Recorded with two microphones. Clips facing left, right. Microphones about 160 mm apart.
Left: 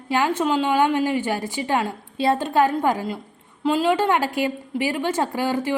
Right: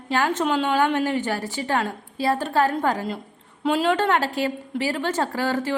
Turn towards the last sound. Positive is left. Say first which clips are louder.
# left 1 dB
turn(degrees=15)  # may be behind; listen again after turning